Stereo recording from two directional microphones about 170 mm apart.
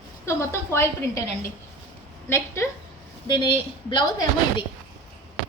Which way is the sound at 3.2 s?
25° left (ahead or behind).